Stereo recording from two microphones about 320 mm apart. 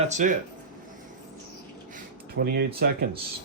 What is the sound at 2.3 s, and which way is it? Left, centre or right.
Speech, right.